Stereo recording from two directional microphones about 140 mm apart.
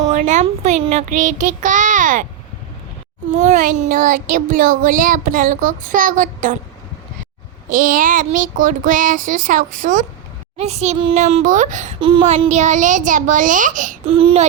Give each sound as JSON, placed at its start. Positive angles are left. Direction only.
{"t": 0.3, "sound": "a child's voice", "side_deg": -60}
{"t": 3.2, "sound": "child singing", "side_deg": -60}
{"t": 7.7, "sound": "child singing", "side_deg": -75}
{"t": 10.6, "sound": "a child's voice", "side_deg": -50}
{"t": 11.9, "sound": "speech", "side_deg": -35}
{"t": 12.5, "sound": "a child's voice", "side_deg": -60}
{"t": 14.0, "sound": "a child's voice", "side_deg": -40}